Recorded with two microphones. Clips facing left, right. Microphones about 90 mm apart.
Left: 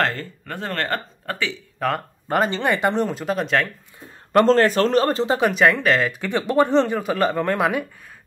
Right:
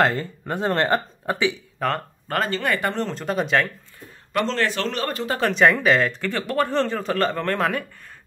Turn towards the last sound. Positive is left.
turn(degrees=15)  # may be behind; listen again after turning